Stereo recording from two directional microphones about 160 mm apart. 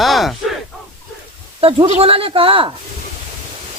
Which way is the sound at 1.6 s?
35° right (ahead or behind).